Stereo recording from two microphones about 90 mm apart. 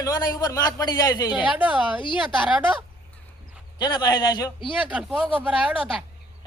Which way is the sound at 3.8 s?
55° left (ahead or behind).